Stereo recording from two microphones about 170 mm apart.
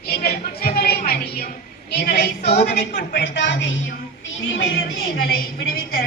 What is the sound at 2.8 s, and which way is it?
Speech, 50° left (ahead or behind).